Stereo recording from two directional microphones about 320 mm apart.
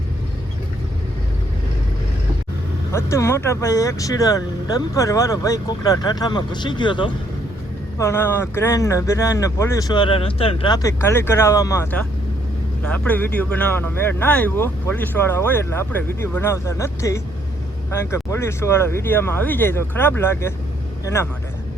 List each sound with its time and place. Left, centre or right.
2.9 s speech: centre